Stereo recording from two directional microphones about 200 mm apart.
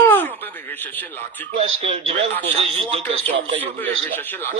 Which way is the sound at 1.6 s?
30° right (ahead or behind).